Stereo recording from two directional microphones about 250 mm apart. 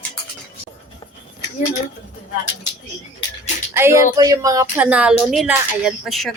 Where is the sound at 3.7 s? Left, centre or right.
Centre.